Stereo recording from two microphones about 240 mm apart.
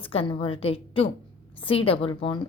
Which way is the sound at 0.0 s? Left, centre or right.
Left.